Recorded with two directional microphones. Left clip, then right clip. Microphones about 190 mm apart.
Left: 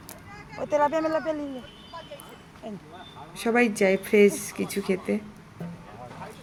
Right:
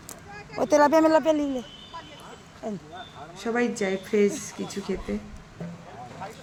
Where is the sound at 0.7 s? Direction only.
55° right (ahead or behind).